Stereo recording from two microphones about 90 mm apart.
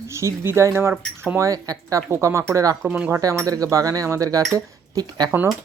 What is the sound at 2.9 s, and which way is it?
Speech, 20° right (ahead or behind).